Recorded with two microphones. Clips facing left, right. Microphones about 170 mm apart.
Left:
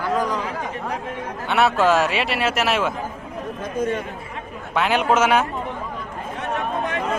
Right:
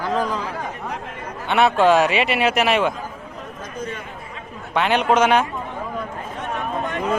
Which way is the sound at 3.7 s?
45° left (ahead or behind).